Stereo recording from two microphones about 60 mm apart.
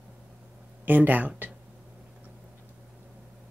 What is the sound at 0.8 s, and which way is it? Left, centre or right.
Speech, right.